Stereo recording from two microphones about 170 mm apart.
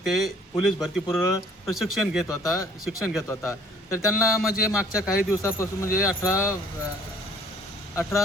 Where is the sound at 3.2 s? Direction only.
15° left (ahead or behind).